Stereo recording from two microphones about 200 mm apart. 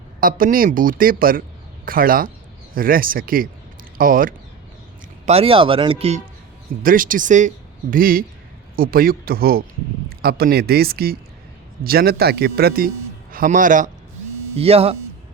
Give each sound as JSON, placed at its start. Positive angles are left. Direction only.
{"t": 0.2, "sound": "speech", "side_deg": -45}
{"t": 5.2, "sound": "speech", "side_deg": -30}
{"t": 6.8, "sound": "a man's voice", "side_deg": -45}
{"t": 14.5, "sound": "speech", "side_deg": -30}